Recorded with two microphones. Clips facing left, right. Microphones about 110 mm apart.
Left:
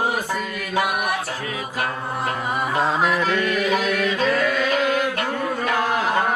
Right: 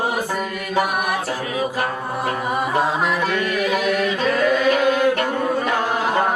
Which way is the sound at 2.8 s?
15° right (ahead or behind).